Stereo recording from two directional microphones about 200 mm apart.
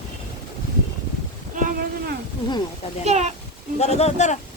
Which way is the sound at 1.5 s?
45° right (ahead or behind).